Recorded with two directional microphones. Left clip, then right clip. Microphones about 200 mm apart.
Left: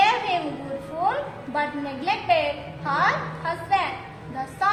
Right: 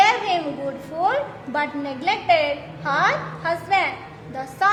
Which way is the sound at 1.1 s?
45° right (ahead or behind).